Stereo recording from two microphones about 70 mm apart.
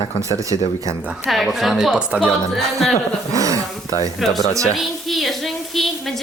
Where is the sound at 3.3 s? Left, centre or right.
Right.